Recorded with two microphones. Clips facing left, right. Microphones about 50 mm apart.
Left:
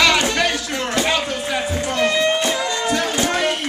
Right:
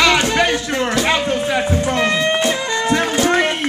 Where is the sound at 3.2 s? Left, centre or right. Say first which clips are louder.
Right 6 dB; right.